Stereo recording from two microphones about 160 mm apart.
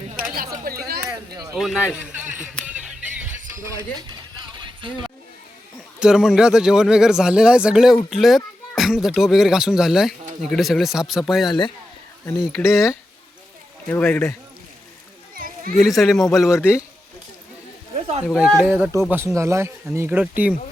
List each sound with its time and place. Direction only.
0.2 s chatter: 60° right (ahead or behind)
0.6 s a sound: 70° right (ahead or behind)
1.3 s a sound: 25° right (ahead or behind)
1.5 s speech: 5° right (ahead or behind)
2.6 s music: 5° right (ahead or behind)
3.5 s speech: 20° right (ahead or behind)
4.6 s a sound: 30° right (ahead or behind)
6.0 s speech: 5° right (ahead or behind)
13.9 s speech: 5° left (ahead or behind)
15.4 s a sound: 60° right (ahead or behind)
15.7 s speech: centre (ahead or behind)
16.5 s a man's voice: 15° left (ahead or behind)
18.3 s speech: centre (ahead or behind)